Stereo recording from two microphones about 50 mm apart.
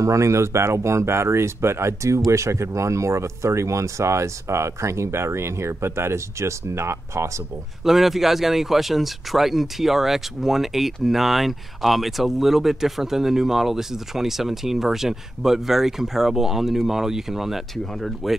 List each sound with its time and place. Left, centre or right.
0.0 s speech: right
7.8 s speech: centre